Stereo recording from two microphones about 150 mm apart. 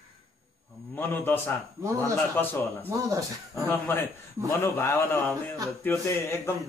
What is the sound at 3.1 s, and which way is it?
Speech, 20° right (ahead or behind).